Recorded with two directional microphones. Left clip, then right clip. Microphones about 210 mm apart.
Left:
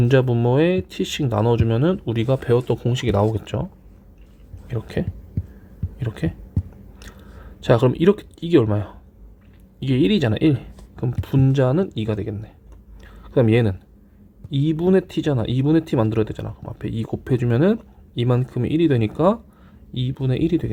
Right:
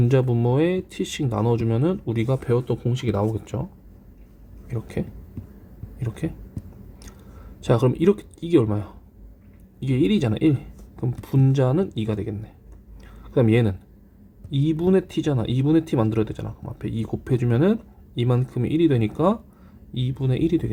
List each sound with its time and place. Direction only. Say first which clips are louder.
0.0 s speech: left 3 dB; 15° left (ahead or behind)
4.7 s speech: left 4 dB; 20° left (ahead or behind)
7.6 s speech: left 4 dB; 20° left (ahead or behind)